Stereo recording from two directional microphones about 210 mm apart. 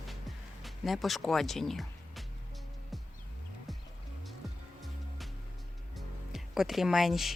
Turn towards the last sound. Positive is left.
turn(degrees=0)  # may be behind; listen again after turning